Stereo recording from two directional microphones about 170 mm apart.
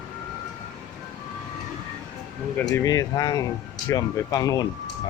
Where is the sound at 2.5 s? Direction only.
10° left (ahead or behind).